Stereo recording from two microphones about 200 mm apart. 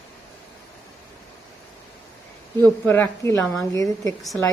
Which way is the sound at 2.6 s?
10° left (ahead or behind).